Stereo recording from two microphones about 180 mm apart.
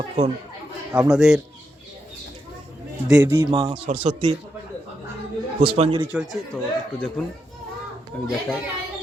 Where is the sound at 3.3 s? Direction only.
25° right (ahead or behind).